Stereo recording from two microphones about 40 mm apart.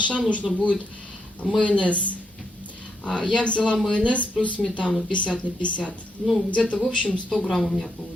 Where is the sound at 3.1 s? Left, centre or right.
Left.